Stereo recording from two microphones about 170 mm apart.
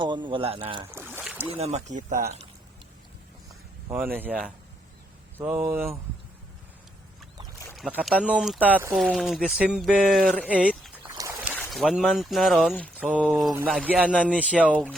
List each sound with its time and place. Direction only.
0.0 s speech: 30° right (ahead or behind)
0.9 s boat: 15° right (ahead or behind)
1.5 s speech: 40° right (ahead or behind)
3.8 s speech: 10° right (ahead or behind)
7.8 s speech: 5° right (ahead or behind)
11.2 s a sound: 20° right (ahead or behind)
11.5 s speech: centre (ahead or behind)
13.0 s speech: 5° right (ahead or behind)